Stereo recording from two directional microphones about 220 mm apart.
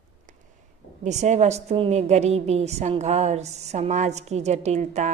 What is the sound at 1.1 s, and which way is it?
A woman's voice, 30° right (ahead or behind).